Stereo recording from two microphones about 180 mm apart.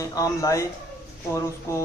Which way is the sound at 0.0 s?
20° left (ahead or behind).